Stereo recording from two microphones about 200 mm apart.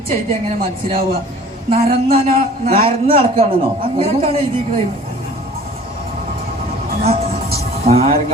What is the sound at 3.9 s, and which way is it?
Speech, 30° right (ahead or behind).